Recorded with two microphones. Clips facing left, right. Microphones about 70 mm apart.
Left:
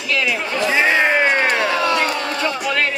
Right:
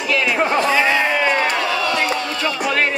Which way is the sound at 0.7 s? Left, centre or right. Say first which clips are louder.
Left 1 dB; left.